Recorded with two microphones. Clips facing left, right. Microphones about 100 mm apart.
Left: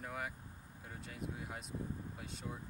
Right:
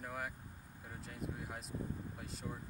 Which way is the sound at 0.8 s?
Centre (ahead or behind).